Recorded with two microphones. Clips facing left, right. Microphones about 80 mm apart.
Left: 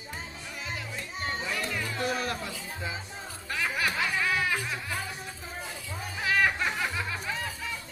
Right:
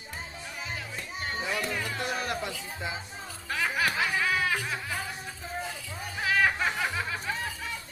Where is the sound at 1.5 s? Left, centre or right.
Centre.